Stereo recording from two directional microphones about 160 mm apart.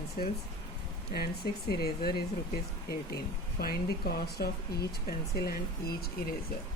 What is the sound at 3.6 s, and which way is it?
Speech, 70° left (ahead or behind).